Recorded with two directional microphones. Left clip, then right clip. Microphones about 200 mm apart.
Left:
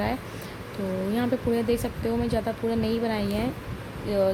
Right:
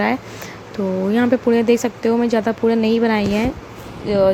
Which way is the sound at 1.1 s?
15° right (ahead or behind).